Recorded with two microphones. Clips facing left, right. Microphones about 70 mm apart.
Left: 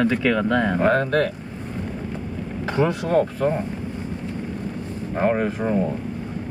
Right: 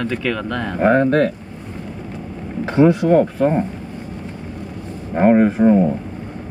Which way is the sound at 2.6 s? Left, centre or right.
Right.